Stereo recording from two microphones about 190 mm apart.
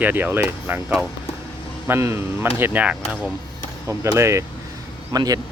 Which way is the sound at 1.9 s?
15° right (ahead or behind).